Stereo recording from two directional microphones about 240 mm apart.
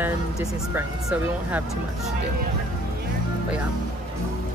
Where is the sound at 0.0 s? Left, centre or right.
Centre.